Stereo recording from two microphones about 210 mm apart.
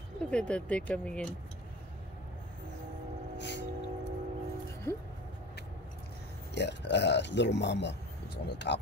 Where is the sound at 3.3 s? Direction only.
55° left (ahead or behind).